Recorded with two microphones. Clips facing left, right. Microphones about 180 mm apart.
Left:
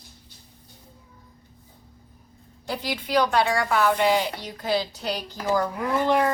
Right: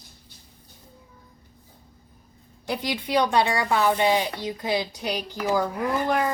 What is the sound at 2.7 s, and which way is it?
A woman's voice, 20° right (ahead or behind).